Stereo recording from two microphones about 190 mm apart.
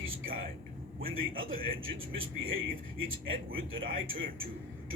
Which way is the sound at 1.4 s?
90° right.